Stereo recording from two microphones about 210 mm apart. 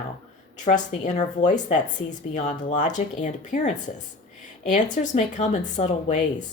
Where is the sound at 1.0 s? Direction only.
35° left (ahead or behind).